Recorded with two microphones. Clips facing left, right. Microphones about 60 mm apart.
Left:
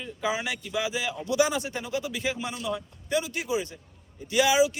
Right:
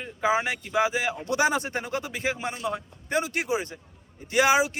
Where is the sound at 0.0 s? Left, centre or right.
Right.